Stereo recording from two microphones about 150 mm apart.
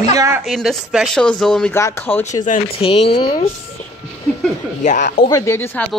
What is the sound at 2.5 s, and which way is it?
Speech, 55° left (ahead or behind).